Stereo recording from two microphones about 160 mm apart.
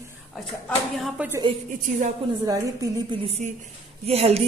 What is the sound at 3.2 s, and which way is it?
Speech, 40° right (ahead or behind).